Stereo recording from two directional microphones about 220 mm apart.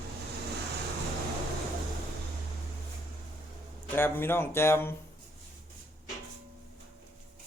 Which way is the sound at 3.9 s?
10° left (ahead or behind).